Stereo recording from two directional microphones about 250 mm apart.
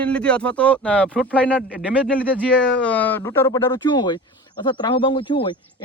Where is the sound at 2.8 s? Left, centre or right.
Centre.